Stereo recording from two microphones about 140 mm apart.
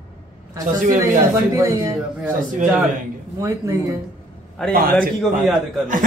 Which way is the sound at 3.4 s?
25° right (ahead or behind).